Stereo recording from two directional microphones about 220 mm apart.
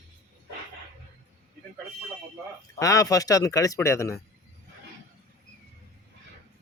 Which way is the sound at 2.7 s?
15° left (ahead or behind).